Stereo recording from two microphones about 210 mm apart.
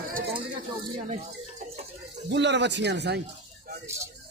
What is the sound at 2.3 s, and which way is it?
Speech, 55° right (ahead or behind).